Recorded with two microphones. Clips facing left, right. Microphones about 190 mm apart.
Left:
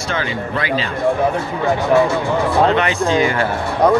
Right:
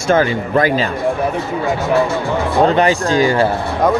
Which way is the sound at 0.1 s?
45° right (ahead or behind).